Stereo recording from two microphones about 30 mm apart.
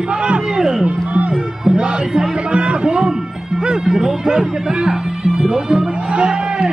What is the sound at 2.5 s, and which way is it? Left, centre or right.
Music, right.